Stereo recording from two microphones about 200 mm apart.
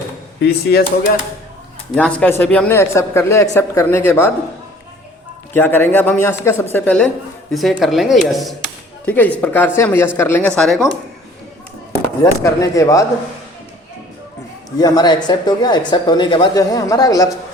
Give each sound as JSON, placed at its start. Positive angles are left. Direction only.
{"t": 0.4, "sound": "speech", "side_deg": 55}
{"t": 2.0, "sound": "a man's voice", "side_deg": 5}
{"t": 5.5, "sound": "a man's voice", "side_deg": 10}
{"t": 12.4, "sound": "a man's voice", "side_deg": 15}
{"t": 14.8, "sound": "a woman's voice", "side_deg": 20}